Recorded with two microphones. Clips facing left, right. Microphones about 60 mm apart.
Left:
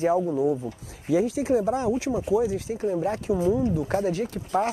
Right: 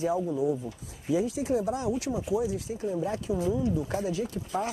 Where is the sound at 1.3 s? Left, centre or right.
Left.